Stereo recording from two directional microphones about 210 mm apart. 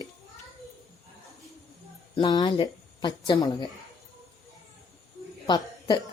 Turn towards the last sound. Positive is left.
turn(degrees=20)  # may be behind; listen again after turning